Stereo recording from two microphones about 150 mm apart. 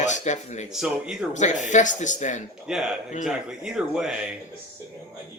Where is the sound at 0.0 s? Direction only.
50° left (ahead or behind).